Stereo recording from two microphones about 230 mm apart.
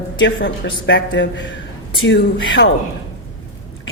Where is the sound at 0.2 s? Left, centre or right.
Left.